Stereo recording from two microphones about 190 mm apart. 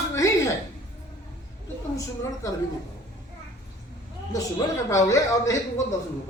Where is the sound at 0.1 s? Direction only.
15° left (ahead or behind).